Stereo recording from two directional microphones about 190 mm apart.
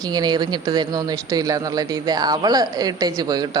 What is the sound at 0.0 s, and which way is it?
Speech, 20° right (ahead or behind).